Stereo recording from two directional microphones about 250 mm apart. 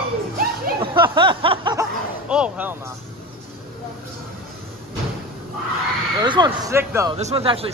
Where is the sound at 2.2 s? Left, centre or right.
Centre.